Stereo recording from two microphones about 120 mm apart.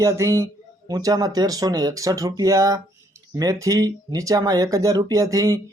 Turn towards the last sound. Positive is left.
turn(degrees=-30)  # may be behind; listen again after turning